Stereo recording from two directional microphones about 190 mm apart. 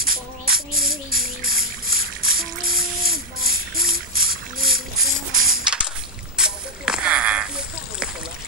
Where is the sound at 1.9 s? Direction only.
50° right (ahead or behind).